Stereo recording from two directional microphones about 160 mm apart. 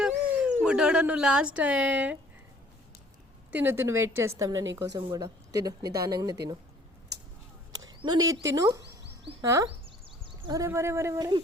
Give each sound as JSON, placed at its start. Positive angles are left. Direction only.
{"t": 0.0, "sound": "dog", "side_deg": -5}
{"t": 0.6, "sound": "speech", "side_deg": -5}
{"t": 3.5, "sound": "a woman's voice", "side_deg": -15}
{"t": 7.7, "sound": "speech", "side_deg": -25}
{"t": 8.8, "sound": "a sound", "side_deg": -90}
{"t": 9.4, "sound": "speech", "side_deg": -20}
{"t": 9.6, "sound": "a sound", "side_deg": -35}